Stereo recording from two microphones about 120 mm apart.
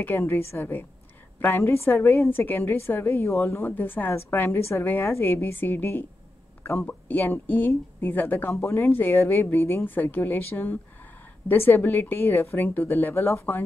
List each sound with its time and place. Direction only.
0.0 s a woman's voice: 20° left (ahead or behind)